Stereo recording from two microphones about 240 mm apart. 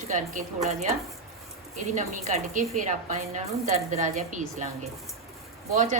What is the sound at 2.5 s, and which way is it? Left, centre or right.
Speech, right.